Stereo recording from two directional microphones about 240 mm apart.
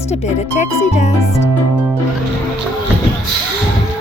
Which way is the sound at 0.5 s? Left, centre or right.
Left.